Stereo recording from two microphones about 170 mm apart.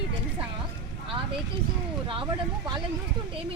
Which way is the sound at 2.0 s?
30° right (ahead or behind).